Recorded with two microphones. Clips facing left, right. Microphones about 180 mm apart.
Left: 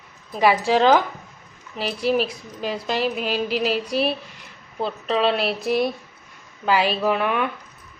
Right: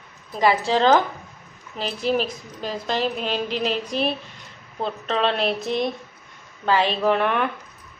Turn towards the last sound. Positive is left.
turn(degrees=0)  # may be behind; listen again after turning